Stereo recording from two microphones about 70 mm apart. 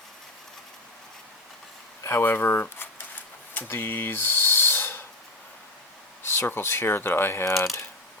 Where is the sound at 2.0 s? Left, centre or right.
Left.